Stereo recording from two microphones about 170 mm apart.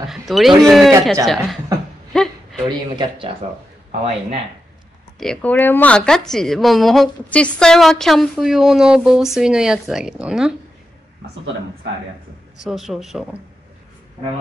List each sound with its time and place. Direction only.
0.1 s speech: centre (ahead or behind)
2.1 s a sound: centre (ahead or behind)
2.7 s speech: 30° right (ahead or behind)
5.2 s speech: 5° left (ahead or behind)
12.6 s speech: centre (ahead or behind)